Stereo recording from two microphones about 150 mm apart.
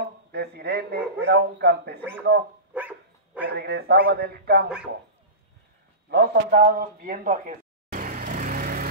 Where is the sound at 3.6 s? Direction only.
90° right.